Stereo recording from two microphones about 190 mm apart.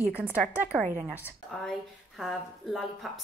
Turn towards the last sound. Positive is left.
turn(degrees=0)  # may be behind; listen again after turning